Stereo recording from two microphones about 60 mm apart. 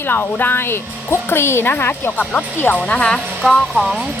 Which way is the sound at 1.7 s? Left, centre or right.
Left.